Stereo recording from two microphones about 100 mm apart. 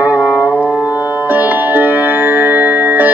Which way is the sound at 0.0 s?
10° left (ahead or behind).